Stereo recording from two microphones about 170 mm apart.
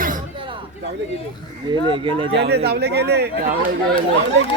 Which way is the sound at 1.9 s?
30° right (ahead or behind).